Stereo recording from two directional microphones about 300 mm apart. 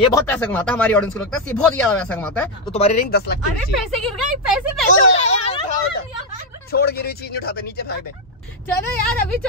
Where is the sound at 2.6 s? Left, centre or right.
Left.